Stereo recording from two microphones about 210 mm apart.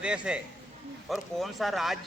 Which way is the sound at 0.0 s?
5° right (ahead or behind).